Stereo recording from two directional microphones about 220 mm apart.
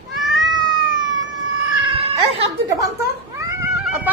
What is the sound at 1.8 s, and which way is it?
Cat, 25° right (ahead or behind).